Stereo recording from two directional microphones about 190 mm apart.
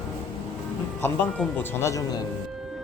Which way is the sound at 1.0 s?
10° left (ahead or behind).